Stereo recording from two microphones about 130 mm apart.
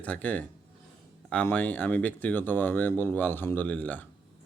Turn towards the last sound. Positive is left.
turn(degrees=15)  # may be behind; listen again after turning